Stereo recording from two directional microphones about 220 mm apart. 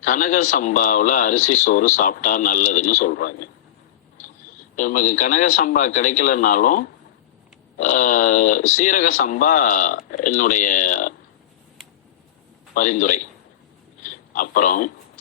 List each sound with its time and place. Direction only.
0.0 s speech: 35° left (ahead or behind)
4.8 s speech: 35° left (ahead or behind)
12.7 s speech: 35° left (ahead or behind)
14.0 s a sound: 40° left (ahead or behind)